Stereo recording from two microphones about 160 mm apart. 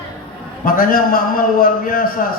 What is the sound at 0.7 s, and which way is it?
A man's voice, 65° left (ahead or behind).